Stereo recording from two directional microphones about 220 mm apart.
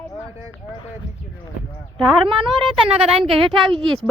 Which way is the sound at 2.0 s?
20° right (ahead or behind).